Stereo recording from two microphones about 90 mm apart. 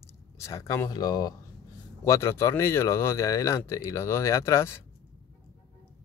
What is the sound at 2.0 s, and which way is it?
Speech, 30° left (ahead or behind).